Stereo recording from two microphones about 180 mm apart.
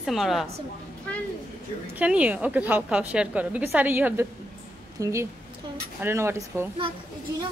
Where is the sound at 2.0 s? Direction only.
10° right (ahead or behind).